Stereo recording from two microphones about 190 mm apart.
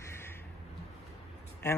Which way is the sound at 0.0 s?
15° left (ahead or behind).